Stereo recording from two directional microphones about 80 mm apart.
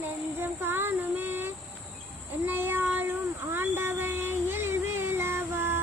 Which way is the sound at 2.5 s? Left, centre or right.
Right.